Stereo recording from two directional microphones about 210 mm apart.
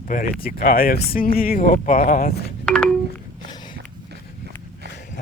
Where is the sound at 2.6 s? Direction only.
5° left (ahead or behind).